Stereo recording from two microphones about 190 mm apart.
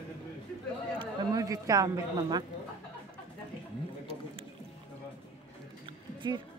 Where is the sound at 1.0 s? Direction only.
20° right (ahead or behind).